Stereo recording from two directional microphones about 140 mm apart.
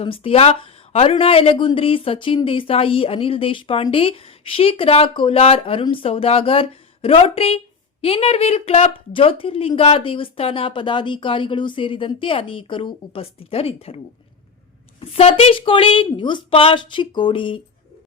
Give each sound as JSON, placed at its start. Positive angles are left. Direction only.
{"t": 0.0, "sound": "speech", "side_deg": 40}
{"t": 15.0, "sound": "speech", "side_deg": 45}